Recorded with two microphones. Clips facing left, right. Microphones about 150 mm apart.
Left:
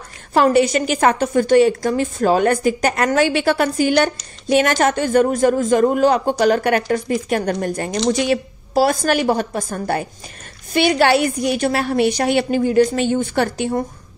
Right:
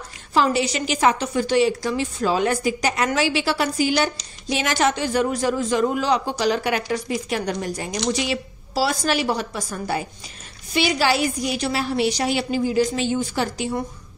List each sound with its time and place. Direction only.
0.3 s a woman's voice: 55° left (ahead or behind)